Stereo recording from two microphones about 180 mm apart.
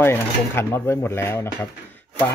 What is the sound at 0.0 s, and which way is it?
Speech, 10° left (ahead or behind).